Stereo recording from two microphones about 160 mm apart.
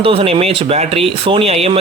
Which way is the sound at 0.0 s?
35° right (ahead or behind).